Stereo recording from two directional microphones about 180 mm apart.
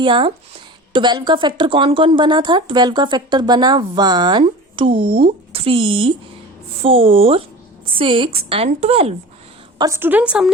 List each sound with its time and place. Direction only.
0.0 s speech: 30° right (ahead or behind)
9.7 s a woman's voice: 20° right (ahead or behind)